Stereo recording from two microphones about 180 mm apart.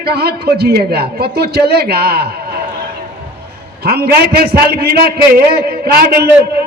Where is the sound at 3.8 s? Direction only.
60° right (ahead or behind).